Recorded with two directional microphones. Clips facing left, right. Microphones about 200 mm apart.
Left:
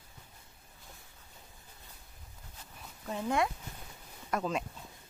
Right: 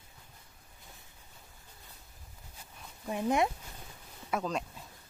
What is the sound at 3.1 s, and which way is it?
Speech, 15° right (ahead or behind).